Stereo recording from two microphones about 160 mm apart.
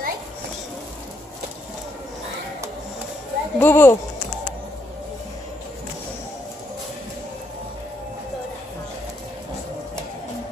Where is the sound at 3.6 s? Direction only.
15° left (ahead or behind).